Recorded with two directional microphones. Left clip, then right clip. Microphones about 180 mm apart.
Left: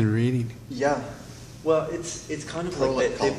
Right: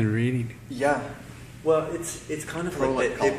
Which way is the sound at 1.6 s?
45° right (ahead or behind).